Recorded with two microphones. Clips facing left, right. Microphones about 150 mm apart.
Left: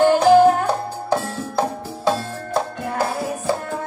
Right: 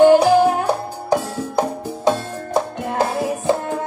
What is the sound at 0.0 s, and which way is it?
Music, 15° right (ahead or behind).